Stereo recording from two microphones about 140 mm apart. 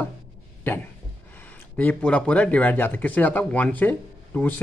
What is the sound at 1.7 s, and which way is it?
A man's voice, 10° left (ahead or behind).